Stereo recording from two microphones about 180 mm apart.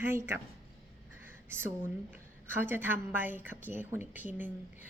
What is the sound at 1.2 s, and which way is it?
A woman's voice, 10° right (ahead or behind).